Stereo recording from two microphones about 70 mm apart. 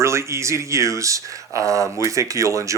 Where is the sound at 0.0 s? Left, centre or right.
Right.